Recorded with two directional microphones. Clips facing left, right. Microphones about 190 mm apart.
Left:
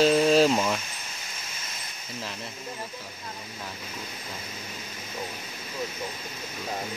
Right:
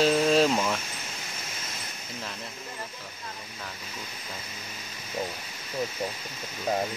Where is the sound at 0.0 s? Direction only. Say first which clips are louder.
Left 2 dB; centre (ahead or behind).